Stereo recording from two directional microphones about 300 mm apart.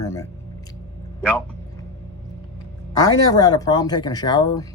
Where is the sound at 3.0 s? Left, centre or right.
Centre.